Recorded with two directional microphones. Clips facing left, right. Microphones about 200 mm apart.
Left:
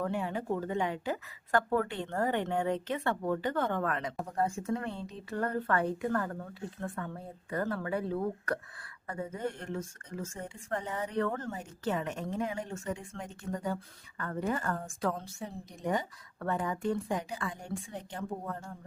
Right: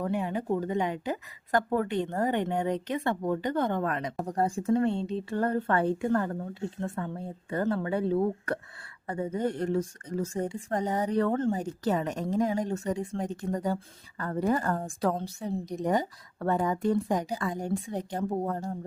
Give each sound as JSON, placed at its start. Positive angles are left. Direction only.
{"t": 0.0, "sound": "speech", "side_deg": -15}
{"t": 4.2, "sound": "speech", "side_deg": -35}